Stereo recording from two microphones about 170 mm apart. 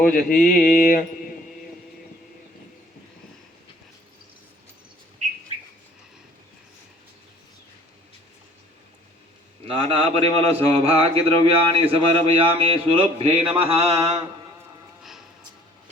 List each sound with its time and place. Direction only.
0.0 s mantra: 55° left (ahead or behind)
9.6 s speech: 35° right (ahead or behind)